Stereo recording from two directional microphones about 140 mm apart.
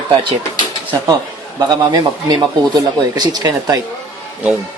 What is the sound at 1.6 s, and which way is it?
Speech, 30° right (ahead or behind).